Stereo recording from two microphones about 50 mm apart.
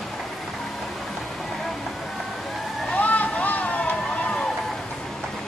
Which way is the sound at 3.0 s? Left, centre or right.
Left.